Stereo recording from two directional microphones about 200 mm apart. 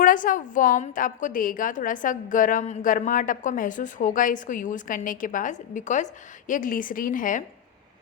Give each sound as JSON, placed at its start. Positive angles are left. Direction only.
{"t": 0.0, "sound": "a woman's voice", "side_deg": 40}